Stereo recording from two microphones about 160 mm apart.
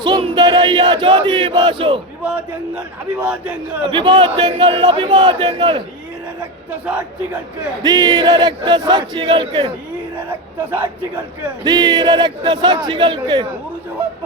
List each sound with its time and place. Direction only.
0.0 s battle cry: 30° right (ahead or behind)
2.2 s a man's voice: 10° right (ahead or behind)
3.8 s battle cry: 30° right (ahead or behind)
7.8 s battle cry: 25° right (ahead or behind)
10.2 s a man's voice: 10° right (ahead or behind)
11.6 s battle cry: 25° right (ahead or behind)